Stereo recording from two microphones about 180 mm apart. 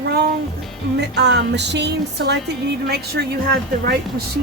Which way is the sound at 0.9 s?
70° right (ahead or behind).